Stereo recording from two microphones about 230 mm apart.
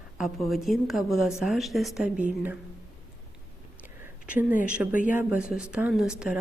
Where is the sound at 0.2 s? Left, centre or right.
Centre.